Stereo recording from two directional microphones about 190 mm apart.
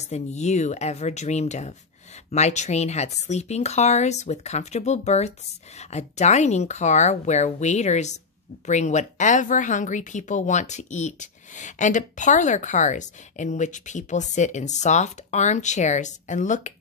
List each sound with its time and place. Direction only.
0.0 s speech: 35° left (ahead or behind)